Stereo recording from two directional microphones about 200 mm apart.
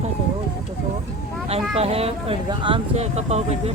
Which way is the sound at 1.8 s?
30° right (ahead or behind).